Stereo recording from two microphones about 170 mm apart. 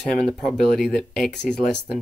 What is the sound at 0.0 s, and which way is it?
Speech, 5° left (ahead or behind).